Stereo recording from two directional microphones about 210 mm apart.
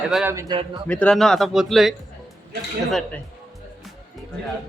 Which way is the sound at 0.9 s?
5° left (ahead or behind).